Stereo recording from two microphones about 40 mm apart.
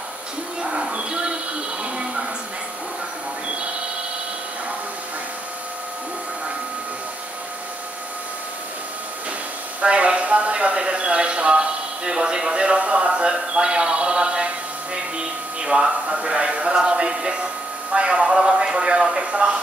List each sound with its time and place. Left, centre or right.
0.6 s music: centre
1.8 s a sound: right
9.8 s a man's voice: right